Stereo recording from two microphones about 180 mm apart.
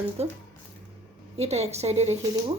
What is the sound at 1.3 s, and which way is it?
A woman's voice, 35° right (ahead or behind).